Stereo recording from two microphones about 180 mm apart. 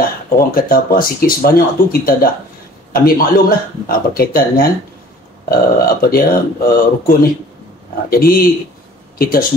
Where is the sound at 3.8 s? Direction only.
55° left (ahead or behind).